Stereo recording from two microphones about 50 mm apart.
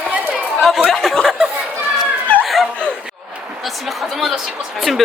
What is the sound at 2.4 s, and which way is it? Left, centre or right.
Laughter, centre.